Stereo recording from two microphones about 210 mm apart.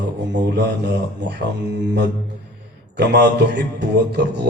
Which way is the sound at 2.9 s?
55° right (ahead or behind).